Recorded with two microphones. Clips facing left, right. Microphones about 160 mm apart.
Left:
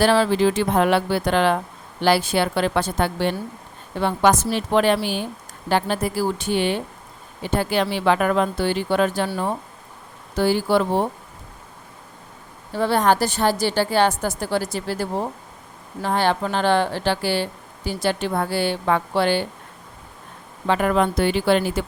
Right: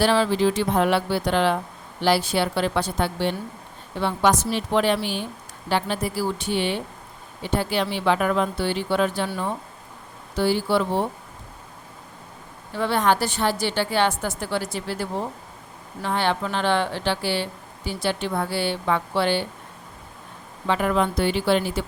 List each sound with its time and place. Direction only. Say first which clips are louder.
0.0 s speech: left 2 dB; 45° left (ahead or behind)
12.7 s a woman's voice: left 3 dB; 40° left (ahead or behind)
20.7 s speech: left 3 dB; 50° left (ahead or behind)